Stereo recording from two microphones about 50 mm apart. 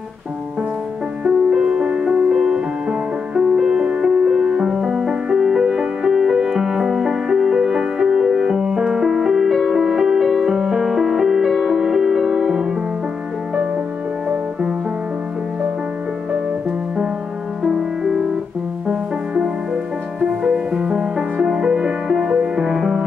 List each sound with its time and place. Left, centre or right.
1.3 s music: centre
17.6 s music: centre
18.9 s music: centre
22.3 s music: centre
22.7 s music: centre